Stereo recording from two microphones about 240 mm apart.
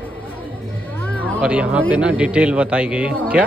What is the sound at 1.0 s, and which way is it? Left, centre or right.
Music, centre.